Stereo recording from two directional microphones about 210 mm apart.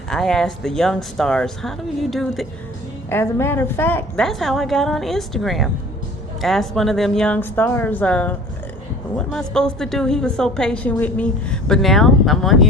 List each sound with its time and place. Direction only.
0.1 s a woman's voice: 5° left (ahead or behind)
3.1 s a woman's voice: 10° left (ahead or behind)